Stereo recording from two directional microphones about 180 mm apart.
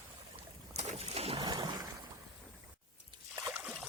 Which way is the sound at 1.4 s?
25° right (ahead or behind).